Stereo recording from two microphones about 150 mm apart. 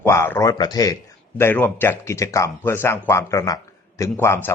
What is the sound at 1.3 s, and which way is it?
A man's voice, 15° left (ahead or behind).